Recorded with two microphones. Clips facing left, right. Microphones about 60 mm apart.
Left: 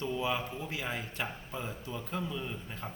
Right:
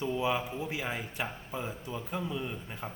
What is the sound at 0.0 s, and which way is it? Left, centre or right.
A man's voice, centre.